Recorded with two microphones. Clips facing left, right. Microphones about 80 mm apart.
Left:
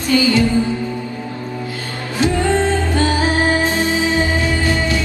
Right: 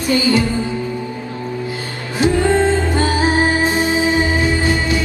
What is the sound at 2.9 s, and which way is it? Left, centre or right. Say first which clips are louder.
Music: right 1 dB; right.